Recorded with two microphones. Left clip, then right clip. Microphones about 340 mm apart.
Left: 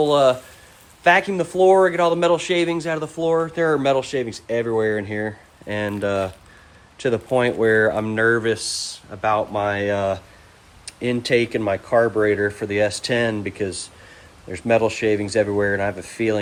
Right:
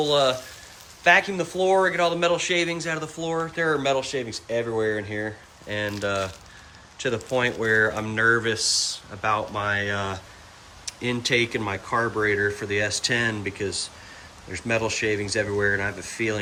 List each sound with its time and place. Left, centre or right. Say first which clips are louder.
0.0 s a man's voice: left 5 dB; centre